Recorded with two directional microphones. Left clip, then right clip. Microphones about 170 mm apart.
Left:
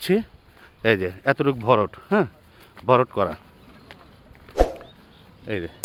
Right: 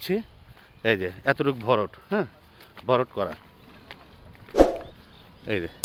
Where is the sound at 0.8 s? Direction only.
20° left (ahead or behind).